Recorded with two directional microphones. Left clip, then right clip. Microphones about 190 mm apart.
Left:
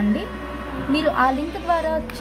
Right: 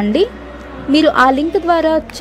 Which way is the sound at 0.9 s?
40° right (ahead or behind).